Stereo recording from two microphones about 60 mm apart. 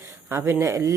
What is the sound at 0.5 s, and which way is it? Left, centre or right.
Speech, right.